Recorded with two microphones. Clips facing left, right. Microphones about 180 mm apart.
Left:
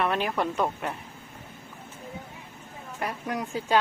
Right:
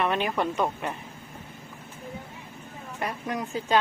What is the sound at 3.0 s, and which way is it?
Speech, 10° left (ahead or behind).